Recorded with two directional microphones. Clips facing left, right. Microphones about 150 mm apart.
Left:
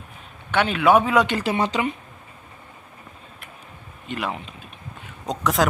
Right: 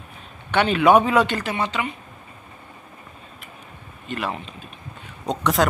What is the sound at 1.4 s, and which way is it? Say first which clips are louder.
Speech: left 3 dB; 35° left (ahead or behind).